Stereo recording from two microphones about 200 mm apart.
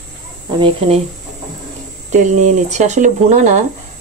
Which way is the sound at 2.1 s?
35° right (ahead or behind).